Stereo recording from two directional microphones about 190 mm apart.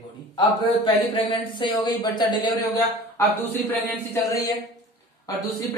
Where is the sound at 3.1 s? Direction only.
10° left (ahead or behind).